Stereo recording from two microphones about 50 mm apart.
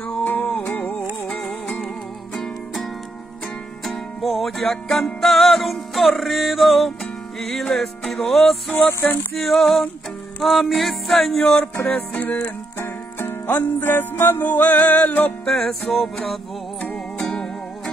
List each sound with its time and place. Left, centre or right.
0.2 s music: left
1.4 s music: centre
8.7 s music: left
9.4 s music: centre
11.8 s music: left
12.7 s music: left
14.4 s music: left
15.4 s music: centre